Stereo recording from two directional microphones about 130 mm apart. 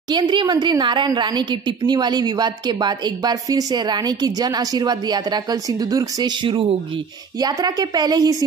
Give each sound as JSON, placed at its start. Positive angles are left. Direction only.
{"t": 0.1, "sound": "a woman's voice", "side_deg": -35}
{"t": 7.3, "sound": "a woman's voice", "side_deg": -30}